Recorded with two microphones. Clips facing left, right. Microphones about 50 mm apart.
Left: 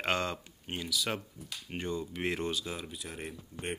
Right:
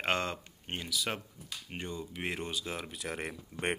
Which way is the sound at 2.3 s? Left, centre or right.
Centre.